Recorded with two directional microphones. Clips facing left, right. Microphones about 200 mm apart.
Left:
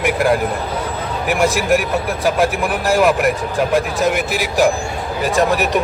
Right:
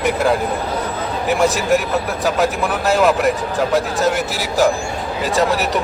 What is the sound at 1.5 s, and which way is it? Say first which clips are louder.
Speech: even; 10° left (ahead or behind).